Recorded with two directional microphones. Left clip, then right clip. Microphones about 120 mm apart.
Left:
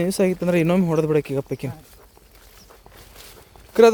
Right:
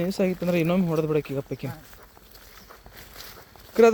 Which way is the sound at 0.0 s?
70° left (ahead or behind).